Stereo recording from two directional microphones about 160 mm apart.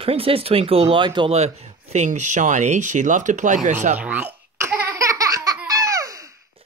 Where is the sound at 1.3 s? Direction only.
45° right (ahead or behind).